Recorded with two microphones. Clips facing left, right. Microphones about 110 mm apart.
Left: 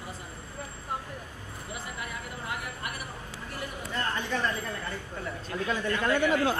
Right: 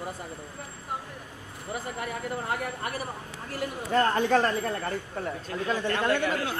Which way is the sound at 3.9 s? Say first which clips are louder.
Right 10 dB; 50° right (ahead or behind).